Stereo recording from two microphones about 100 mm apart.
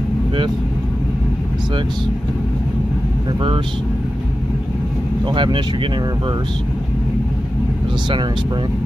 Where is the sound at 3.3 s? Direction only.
60° right (ahead or behind).